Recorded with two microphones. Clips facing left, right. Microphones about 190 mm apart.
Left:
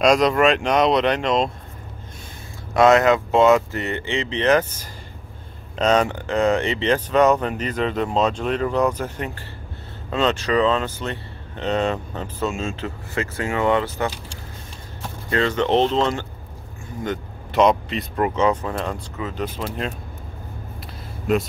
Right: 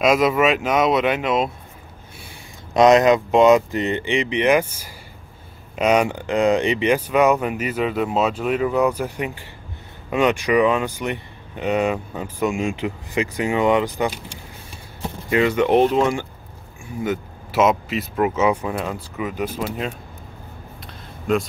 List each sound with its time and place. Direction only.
0.0 s speech: 5° right (ahead or behind)
2.7 s speech: 20° right (ahead or behind)
15.2 s speech: 10° right (ahead or behind)
20.8 s a sound: 5° left (ahead or behind)